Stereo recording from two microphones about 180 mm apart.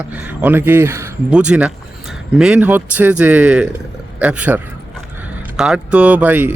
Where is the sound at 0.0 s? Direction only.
10° right (ahead or behind).